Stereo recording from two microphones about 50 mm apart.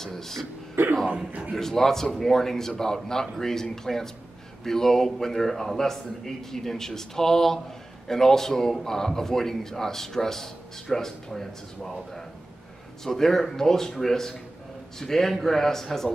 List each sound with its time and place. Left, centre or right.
0.0 s a man's voice: centre
0.8 s a sound: right
1.5 s a man's voice: centre